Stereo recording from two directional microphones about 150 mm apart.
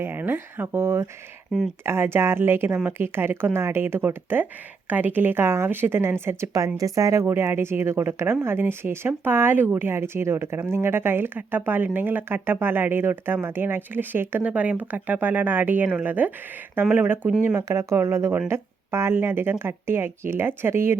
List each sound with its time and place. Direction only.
0.0 s a woman's voice: 15° right (ahead or behind)